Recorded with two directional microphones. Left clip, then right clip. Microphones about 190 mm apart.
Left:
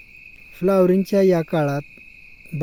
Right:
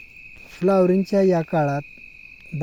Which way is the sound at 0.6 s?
15° left (ahead or behind).